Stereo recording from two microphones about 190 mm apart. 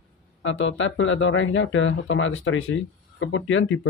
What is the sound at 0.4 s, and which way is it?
Speech, 85° left.